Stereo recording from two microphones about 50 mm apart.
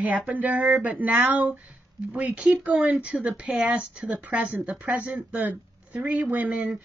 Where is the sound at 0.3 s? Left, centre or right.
Right.